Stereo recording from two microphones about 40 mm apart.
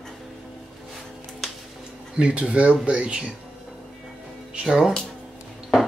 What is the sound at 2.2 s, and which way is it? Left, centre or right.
Speech, right.